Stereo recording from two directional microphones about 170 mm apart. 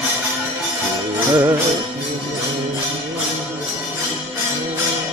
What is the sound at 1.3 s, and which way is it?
Music, 25° right (ahead or behind).